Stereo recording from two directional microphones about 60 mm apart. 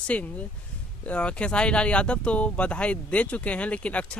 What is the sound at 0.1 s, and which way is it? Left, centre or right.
Speech, left.